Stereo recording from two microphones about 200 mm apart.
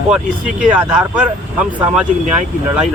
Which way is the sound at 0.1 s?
5° right (ahead or behind).